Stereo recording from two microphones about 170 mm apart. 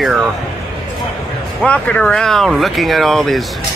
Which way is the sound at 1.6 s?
10° left (ahead or behind).